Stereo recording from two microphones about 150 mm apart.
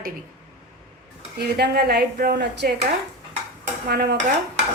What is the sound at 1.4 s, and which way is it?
A woman's voice, 90° right.